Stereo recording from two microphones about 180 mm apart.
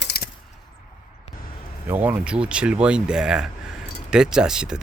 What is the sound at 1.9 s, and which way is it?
Speech, 10° right (ahead or behind).